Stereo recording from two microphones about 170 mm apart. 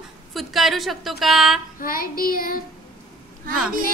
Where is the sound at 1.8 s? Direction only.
60° left (ahead or behind).